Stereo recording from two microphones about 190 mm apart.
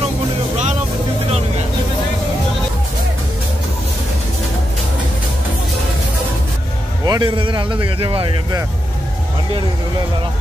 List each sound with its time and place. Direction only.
7.1 s a man's voice: 25° right (ahead or behind)